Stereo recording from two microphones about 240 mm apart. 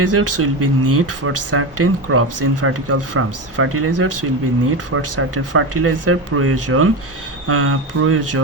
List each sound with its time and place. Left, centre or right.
0.1 s speech: right